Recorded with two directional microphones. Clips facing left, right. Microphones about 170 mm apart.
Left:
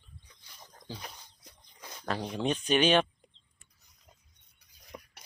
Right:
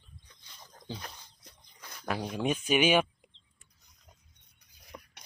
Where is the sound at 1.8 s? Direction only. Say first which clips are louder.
Left 2 dB; 20° left (ahead or behind).